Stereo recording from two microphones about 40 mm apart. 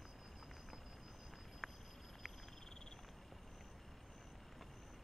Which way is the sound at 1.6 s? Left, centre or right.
Centre.